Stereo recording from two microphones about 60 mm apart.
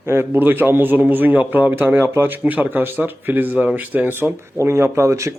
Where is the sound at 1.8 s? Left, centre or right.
Right.